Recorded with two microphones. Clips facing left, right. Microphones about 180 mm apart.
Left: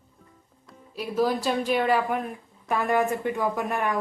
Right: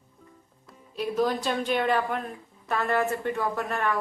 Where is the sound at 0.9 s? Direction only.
5° left (ahead or behind).